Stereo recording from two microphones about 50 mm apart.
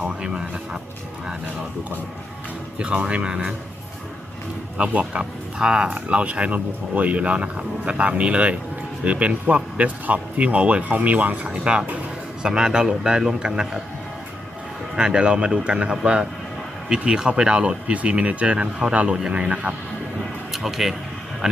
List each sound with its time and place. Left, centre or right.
0.2 s a man's voice: centre
2.7 s speech: right
4.8 s speech: right
11.4 s a man's voice: right
14.9 s a man's voice: centre
20.5 s speech: centre